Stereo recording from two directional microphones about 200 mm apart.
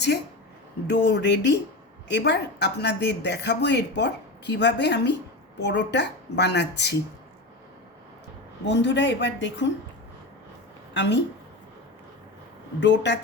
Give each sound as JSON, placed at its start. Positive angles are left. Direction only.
{"t": 0.9, "sound": "speech", "side_deg": 60}
{"t": 8.6, "sound": "speech", "side_deg": 60}
{"t": 10.9, "sound": "a woman's voice", "side_deg": 60}
{"t": 12.8, "sound": "speech", "side_deg": 65}